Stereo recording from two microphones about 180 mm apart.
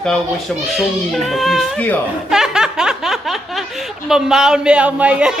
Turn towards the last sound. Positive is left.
turn(degrees=-5)  # may be behind; listen again after turning